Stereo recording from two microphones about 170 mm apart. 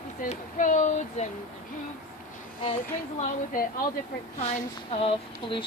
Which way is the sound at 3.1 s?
45° left (ahead or behind).